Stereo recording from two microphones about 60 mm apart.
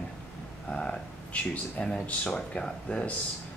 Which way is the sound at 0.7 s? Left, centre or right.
Centre.